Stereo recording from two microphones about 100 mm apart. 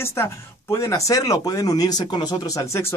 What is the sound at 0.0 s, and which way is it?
Speech, 25° left (ahead or behind).